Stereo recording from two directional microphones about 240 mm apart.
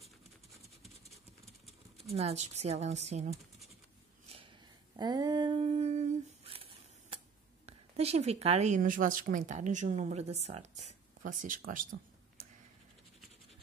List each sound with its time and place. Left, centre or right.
0.8 s scratch: centre
2.1 s speech: right
4.9 s a sound: centre
7.6 s speech: right